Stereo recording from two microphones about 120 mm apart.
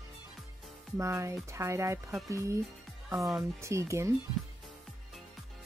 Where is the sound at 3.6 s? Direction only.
25° right (ahead or behind).